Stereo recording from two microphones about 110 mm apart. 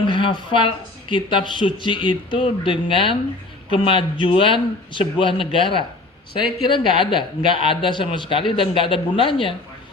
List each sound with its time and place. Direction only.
0.1 s speech: 50° left (ahead or behind)